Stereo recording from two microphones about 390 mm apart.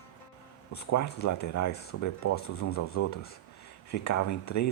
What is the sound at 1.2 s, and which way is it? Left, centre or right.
Speech, left.